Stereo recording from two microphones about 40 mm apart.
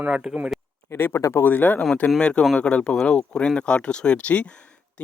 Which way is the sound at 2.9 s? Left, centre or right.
Centre.